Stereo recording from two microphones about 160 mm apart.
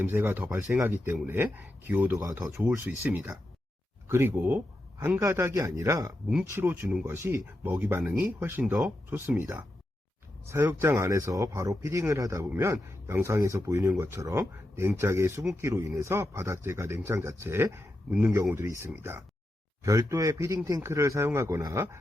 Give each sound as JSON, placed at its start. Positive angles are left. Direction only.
{"t": 0.0, "sound": "speech", "side_deg": -10}